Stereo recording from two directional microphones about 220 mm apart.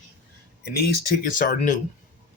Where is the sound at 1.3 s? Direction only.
35° left (ahead or behind).